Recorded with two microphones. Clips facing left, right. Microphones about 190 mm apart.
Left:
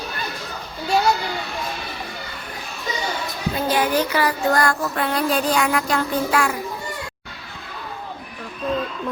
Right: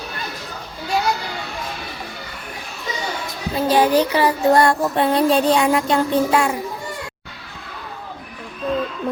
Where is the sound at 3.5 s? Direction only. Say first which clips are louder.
Right 5 dB; 30° right (ahead or behind).